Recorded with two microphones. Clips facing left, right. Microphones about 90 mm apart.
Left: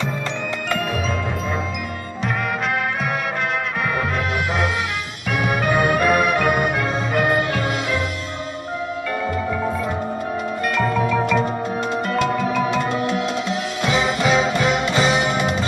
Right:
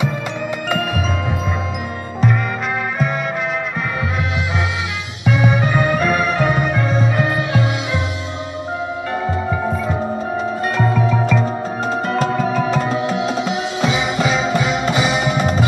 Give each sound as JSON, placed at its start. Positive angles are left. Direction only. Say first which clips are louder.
{"t": 5.7, "sound": "music", "louder": "even", "side_deg": 15}
{"t": 6.0, "sound": "music", "louder": "even", "side_deg": 5}
{"t": 7.3, "sound": "music", "louder": "right 1 dB", "side_deg": -20}
{"t": 12.2, "sound": "music", "louder": "right 1 dB", "side_deg": -35}
{"t": 13.5, "sound": "music", "louder": "right 2 dB", "side_deg": -15}